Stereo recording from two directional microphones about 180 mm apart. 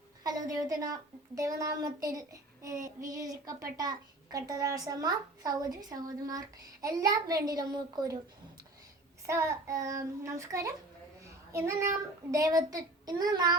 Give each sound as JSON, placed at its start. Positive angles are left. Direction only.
{"t": 0.2, "sound": "a woman's voice", "side_deg": -20}
{"t": 9.2, "sound": "child singing", "side_deg": -15}
{"t": 11.5, "sound": "a child's voice", "side_deg": -15}